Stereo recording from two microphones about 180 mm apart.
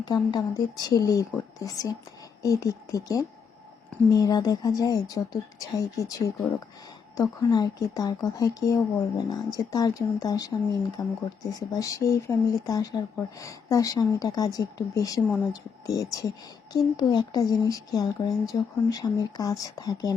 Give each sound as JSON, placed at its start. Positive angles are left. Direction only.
{"t": 0.0, "sound": "speech", "side_deg": 25}